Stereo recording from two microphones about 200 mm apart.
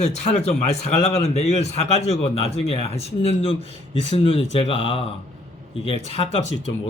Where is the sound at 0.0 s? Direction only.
35° left (ahead or behind).